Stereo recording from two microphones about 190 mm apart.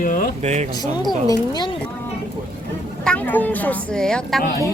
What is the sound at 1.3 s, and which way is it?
Speech, 25° left (ahead or behind).